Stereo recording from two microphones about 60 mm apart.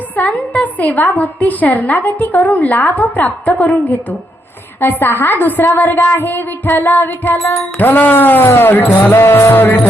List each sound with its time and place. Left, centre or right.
0.2 s a woman's voice: left